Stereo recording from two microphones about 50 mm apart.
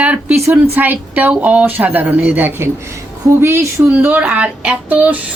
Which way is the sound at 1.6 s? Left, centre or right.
Right.